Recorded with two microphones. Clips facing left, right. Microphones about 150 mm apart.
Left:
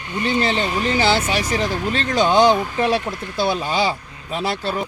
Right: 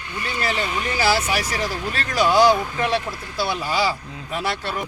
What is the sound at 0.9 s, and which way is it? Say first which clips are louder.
Speech: even; 25° left (ahead or behind).